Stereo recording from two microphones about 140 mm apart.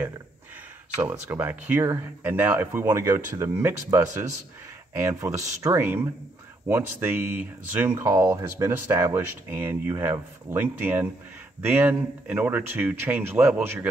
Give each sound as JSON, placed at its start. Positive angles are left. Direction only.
{"t": 1.3, "sound": "speech", "side_deg": -15}